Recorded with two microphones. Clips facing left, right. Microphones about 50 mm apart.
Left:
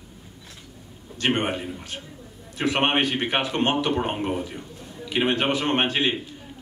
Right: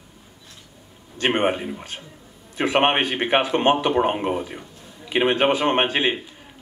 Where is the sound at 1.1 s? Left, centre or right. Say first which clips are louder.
Right 3 dB; right.